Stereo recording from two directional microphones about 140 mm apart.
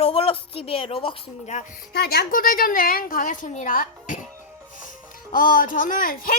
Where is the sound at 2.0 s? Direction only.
90° left.